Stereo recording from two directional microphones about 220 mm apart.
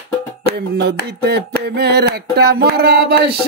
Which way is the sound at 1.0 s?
50° right (ahead or behind).